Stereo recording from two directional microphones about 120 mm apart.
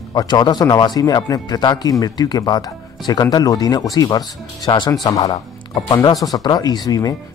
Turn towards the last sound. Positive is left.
turn(degrees=30)  # may be behind; listen again after turning